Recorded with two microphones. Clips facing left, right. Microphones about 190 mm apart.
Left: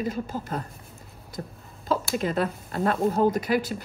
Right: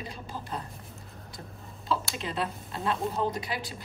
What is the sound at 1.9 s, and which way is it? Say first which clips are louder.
Speech: left 6 dB; 50° left (ahead or behind).